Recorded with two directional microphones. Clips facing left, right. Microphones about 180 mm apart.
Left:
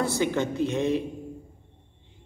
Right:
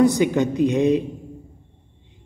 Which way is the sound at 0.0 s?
15° right (ahead or behind).